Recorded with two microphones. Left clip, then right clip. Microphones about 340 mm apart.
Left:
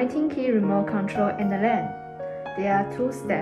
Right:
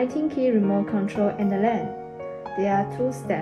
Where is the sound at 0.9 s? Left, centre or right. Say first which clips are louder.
Even; left.